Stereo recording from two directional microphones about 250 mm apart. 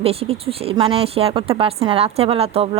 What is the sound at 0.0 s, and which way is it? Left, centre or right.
Speech, right.